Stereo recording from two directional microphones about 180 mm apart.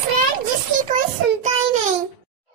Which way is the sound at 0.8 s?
45° right (ahead or behind).